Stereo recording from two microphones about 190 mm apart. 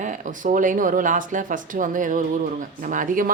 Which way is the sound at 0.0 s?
40° right (ahead or behind).